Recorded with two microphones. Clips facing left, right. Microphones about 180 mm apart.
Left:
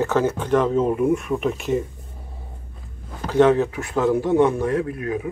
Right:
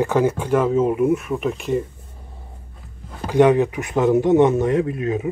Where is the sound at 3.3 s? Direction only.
15° right (ahead or behind).